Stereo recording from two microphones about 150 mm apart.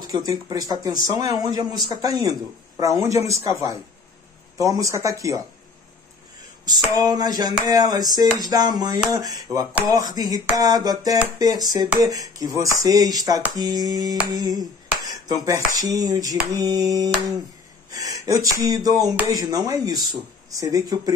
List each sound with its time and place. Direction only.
0.2 s speech: 25° right (ahead or behind)
6.6 s speech: 25° right (ahead or behind)
14.3 s a sound: 25° right (ahead or behind)
16.5 s speech: 25° right (ahead or behind)
18.2 s speech: 20° right (ahead or behind)